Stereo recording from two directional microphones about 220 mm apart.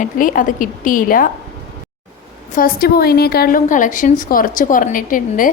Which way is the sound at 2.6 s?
45° left (ahead or behind).